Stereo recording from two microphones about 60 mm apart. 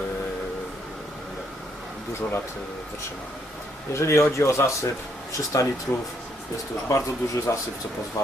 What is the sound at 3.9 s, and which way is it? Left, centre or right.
Speech, left.